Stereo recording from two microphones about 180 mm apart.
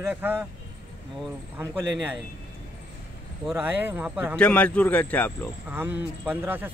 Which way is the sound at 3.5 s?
10° right (ahead or behind).